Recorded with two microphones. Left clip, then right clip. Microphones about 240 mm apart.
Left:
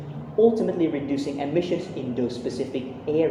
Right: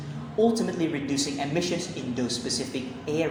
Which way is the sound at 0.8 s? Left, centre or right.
Right.